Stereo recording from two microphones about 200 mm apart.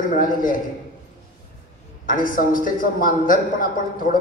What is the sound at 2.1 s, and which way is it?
A man's voice, 45° left (ahead or behind).